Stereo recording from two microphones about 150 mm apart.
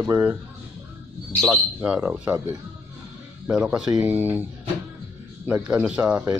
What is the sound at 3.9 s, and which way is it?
Speech, 15° right (ahead or behind).